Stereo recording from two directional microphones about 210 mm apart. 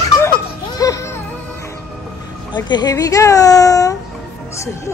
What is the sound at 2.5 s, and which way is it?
A child's voice, 20° left (ahead or behind).